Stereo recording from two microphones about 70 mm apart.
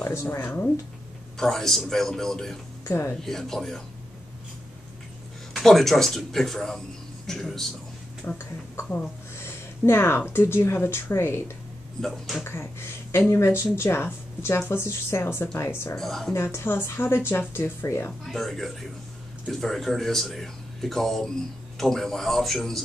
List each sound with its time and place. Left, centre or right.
0.0 s speech: left
0.4 s speech: left
1.4 s speech: centre
2.8 s speech: left
3.2 s speech: centre
5.5 s speech: centre
8.3 s speech: left
12.0 s speech: centre
13.1 s speech: left
16.0 s speech: centre
16.5 s speech: left
18.2 s speech: centre